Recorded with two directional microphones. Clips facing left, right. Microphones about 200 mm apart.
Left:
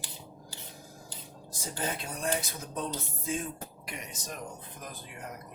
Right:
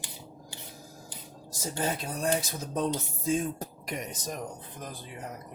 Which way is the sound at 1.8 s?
40° right (ahead or behind).